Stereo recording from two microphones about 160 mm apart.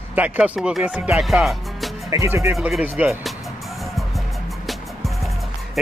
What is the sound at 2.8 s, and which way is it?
Speech, 10° right (ahead or behind).